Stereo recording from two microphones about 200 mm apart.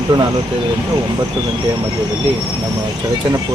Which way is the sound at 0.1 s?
25° right (ahead or behind).